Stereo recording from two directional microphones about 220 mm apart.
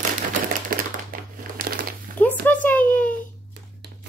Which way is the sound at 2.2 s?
5° left (ahead or behind).